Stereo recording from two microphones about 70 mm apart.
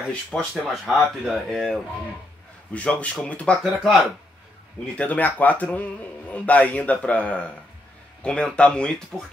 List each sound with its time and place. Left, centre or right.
0.1 s speech: centre
0.7 s speech: centre
2.7 s a man's voice: centre
3.6 s speech: centre
4.9 s a man's voice: left
9.1 s speech: centre